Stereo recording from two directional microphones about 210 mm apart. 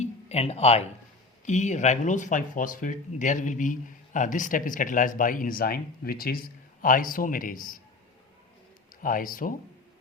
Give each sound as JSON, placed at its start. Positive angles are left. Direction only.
{"t": 0.0, "sound": "a sound", "side_deg": 30}
{"t": 1.5, "sound": "speech", "side_deg": 35}
{"t": 9.0, "sound": "speech", "side_deg": 40}